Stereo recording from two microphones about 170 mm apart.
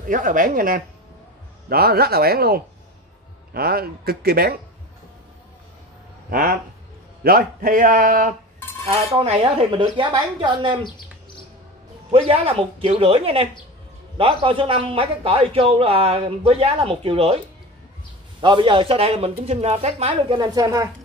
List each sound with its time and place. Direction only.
0.1 s a man's voice: 50° right (ahead or behind)
1.7 s speech: 65° right (ahead or behind)
6.3 s a man's voice: 55° right (ahead or behind)
8.8 s a man's voice: 35° right (ahead or behind)
12.1 s a man's voice: 35° right (ahead or behind)
18.4 s a man's voice: 30° right (ahead or behind)
20.2 s a woman's voice: 25° right (ahead or behind)